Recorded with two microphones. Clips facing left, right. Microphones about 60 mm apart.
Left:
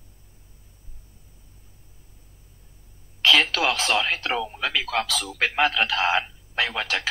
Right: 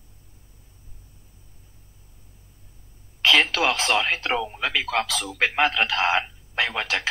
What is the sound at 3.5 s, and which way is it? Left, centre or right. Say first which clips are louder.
Speech: right 1 dB; right.